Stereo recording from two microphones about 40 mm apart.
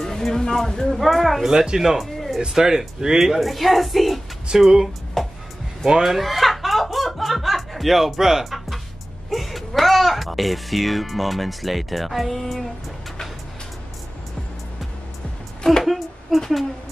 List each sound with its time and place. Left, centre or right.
0.0 s speech: centre
1.5 s speech: centre
2.1 s music: centre
2.4 s speech: centre
4.5 s speech: centre
5.2 s music: centre
5.9 s speech: centre
6.1 s snicker: centre
8.5 s music: centre
9.3 s speech: centre
15.8 s a sound: centre
16.3 s speech: centre